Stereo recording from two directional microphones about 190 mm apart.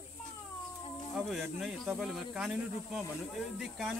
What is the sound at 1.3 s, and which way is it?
Speech, centre (ahead or behind).